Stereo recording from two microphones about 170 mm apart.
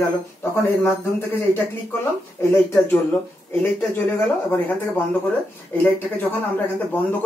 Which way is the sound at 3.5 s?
10° left (ahead or behind).